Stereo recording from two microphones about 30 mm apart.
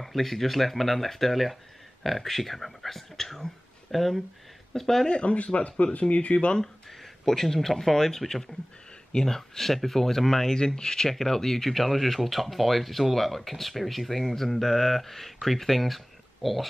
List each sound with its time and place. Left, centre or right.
0.0 s speech: centre
5.0 s speech: left
6.6 s speech: centre
11.7 s speech: centre